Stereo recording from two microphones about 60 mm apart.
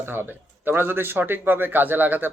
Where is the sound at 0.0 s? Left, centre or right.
Right.